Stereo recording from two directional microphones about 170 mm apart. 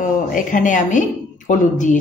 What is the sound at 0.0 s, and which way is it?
Speech, 50° left (ahead or behind).